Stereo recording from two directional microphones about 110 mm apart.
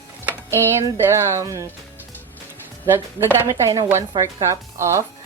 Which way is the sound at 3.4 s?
30° right (ahead or behind).